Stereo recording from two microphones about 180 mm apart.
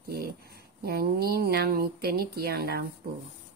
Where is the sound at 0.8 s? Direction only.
60° right (ahead or behind).